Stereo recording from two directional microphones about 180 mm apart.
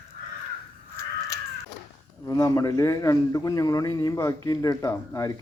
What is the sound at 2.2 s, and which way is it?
A man's voice, 20° left (ahead or behind).